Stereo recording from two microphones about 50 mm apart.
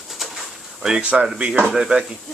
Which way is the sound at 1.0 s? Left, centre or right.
Right.